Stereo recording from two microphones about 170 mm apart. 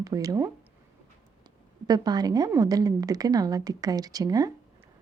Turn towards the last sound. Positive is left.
turn(degrees=-20)  # may be behind; listen again after turning